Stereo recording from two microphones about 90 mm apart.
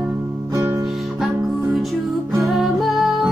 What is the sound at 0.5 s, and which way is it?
Music, 30° right (ahead or behind).